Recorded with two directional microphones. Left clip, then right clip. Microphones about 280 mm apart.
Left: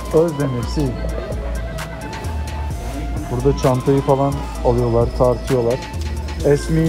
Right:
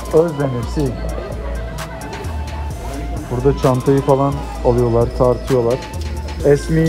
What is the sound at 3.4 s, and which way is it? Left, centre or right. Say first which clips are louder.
Speech: right 2 dB; right.